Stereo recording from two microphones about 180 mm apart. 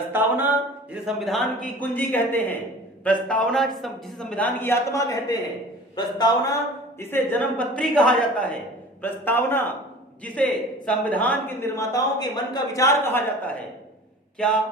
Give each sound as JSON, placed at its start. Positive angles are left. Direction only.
{"t": 0.1, "sound": "speech", "side_deg": -10}
{"t": 1.0, "sound": "a man's voice", "side_deg": 0}
{"t": 7.0, "sound": "a man's voice", "side_deg": 10}
{"t": 14.3, "sound": "a man's voice", "side_deg": 5}